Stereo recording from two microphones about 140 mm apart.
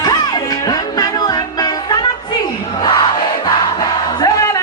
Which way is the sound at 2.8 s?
30° left (ahead or behind).